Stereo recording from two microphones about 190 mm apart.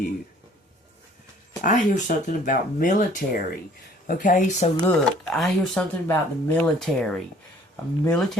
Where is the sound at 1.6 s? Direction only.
40° left (ahead or behind).